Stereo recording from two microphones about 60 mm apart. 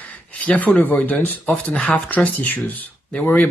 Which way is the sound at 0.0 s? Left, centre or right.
Left.